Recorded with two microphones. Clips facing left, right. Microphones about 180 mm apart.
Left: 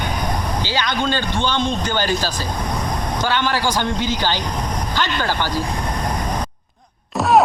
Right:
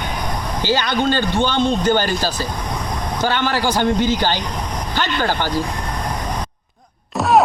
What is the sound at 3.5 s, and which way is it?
Speech, 15° right (ahead or behind).